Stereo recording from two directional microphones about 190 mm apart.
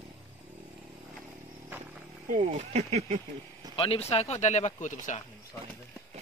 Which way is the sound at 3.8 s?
30° left (ahead or behind).